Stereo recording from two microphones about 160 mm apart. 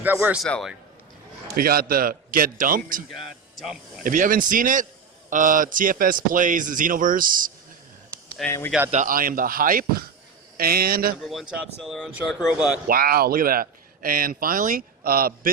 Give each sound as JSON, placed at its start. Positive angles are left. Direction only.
{"t": 0.0, "sound": "a man's voice", "side_deg": -10}
{"t": 0.4, "sound": "speech", "side_deg": 5}
{"t": 1.5, "sound": "speech", "side_deg": -70}
{"t": 3.6, "sound": "speech", "side_deg": -5}
{"t": 4.0, "sound": "speech", "side_deg": -55}
{"t": 8.4, "sound": "a man's voice", "side_deg": 15}
{"t": 8.9, "sound": "speech", "side_deg": -55}
{"t": 11.2, "sound": "speech", "side_deg": 0}
{"t": 12.9, "sound": "speech", "side_deg": -65}